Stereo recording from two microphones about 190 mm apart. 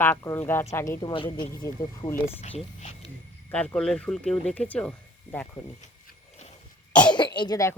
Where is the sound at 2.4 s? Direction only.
35° left (ahead or behind).